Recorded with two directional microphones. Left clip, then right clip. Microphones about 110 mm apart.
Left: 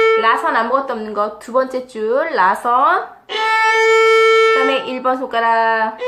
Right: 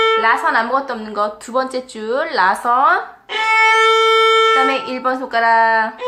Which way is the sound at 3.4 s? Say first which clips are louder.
Right 1 dB; 10° right (ahead or behind).